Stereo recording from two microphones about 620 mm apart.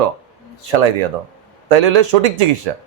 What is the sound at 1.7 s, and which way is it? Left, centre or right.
A man's voice, right.